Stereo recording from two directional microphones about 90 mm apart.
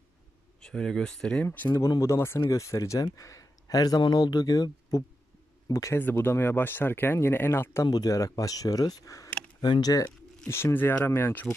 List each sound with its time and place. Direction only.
0.6 s speech: 10° left (ahead or behind)
1.9 s speech: 35° left (ahead or behind)
5.9 s speech: 20° left (ahead or behind)
7.8 s speech: 45° left (ahead or behind)
9.6 s speech: 50° left (ahead or behind)
10.5 s speech: 25° left (ahead or behind)